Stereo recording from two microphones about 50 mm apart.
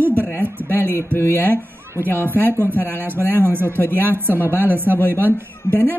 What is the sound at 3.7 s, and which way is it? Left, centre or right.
Speech, left.